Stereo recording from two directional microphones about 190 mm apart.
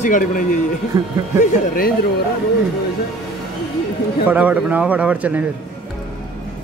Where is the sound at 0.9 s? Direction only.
20° right (ahead or behind).